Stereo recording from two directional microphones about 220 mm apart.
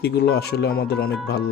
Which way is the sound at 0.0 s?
50° left (ahead or behind).